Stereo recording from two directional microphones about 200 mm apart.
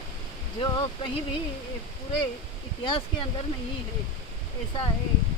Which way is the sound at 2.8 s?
25° left (ahead or behind).